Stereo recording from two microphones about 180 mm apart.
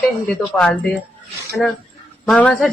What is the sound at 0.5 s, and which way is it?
Speech, 5° left (ahead or behind).